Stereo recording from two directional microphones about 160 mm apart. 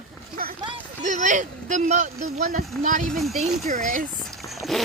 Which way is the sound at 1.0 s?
50° right (ahead or behind).